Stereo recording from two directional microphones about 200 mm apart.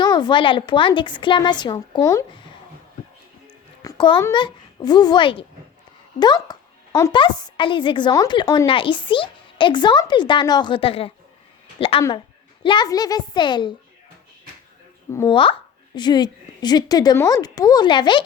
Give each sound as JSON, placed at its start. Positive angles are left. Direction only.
{"t": 0.0, "sound": "a woman's voice", "side_deg": 20}
{"t": 3.8, "sound": "a woman's voice", "side_deg": 25}
{"t": 15.1, "sound": "a woman's voice", "side_deg": 15}